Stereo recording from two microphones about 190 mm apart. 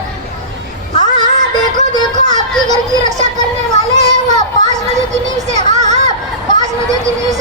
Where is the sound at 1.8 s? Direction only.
35° right (ahead or behind).